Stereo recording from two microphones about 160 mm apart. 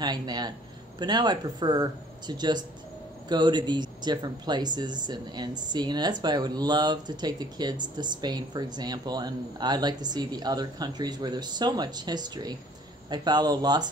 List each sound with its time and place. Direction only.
0.0 s speech: 25° right (ahead or behind)